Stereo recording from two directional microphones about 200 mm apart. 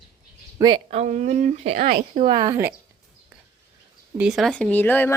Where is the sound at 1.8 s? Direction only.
45° right (ahead or behind).